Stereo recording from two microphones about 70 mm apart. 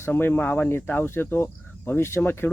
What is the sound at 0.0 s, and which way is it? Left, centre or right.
Speech, left.